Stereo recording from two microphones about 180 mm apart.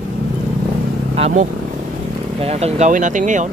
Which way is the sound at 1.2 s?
40° right (ahead or behind).